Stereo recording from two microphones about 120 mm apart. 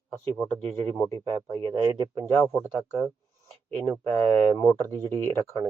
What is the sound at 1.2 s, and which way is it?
Speech, 40° right (ahead or behind).